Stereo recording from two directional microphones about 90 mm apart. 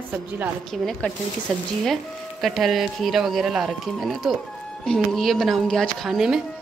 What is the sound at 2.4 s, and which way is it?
Speech, centre (ahead or behind).